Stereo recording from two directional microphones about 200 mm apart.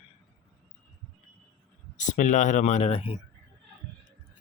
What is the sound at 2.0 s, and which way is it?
Speech, 40° left (ahead or behind).